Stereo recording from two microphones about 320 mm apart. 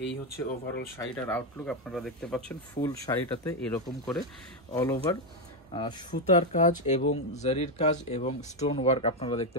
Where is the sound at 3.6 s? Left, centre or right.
Centre.